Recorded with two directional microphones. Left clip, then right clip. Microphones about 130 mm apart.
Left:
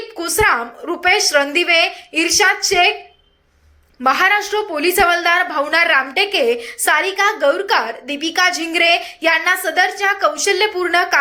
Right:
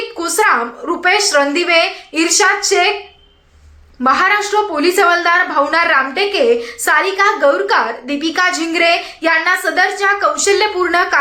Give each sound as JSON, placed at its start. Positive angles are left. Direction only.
{"t": 0.2, "sound": "a woman's voice", "side_deg": 20}
{"t": 4.0, "sound": "a woman's voice", "side_deg": 20}